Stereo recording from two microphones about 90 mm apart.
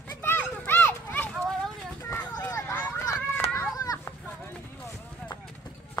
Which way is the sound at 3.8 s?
40° left (ahead or behind).